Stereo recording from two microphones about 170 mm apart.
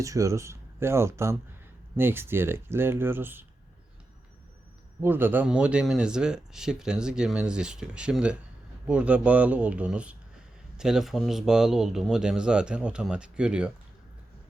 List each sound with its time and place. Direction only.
0.0 s speech: 20° right (ahead or behind)
4.9 s speech: 10° right (ahead or behind)